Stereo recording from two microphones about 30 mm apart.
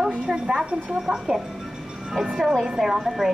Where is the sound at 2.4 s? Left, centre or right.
Centre.